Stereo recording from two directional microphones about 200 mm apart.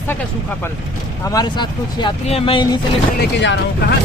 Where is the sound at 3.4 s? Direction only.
60° left (ahead or behind).